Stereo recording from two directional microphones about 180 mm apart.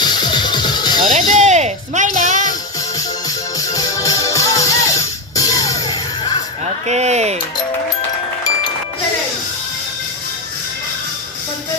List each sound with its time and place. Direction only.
0.0 s music: 25° left (ahead or behind)
1.1 s music: 45° right (ahead or behind)
3.2 s music: 20° left (ahead or behind)
6.8 s speech: 40° right (ahead or behind)